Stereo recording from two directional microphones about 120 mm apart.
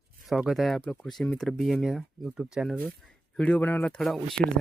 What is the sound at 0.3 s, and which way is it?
Speech, centre (ahead or behind).